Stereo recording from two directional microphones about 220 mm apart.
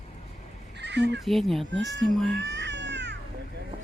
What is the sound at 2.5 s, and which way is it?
Music, 50° right (ahead or behind).